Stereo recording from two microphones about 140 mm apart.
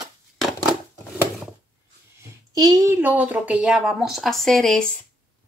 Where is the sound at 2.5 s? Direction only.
25° right (ahead or behind).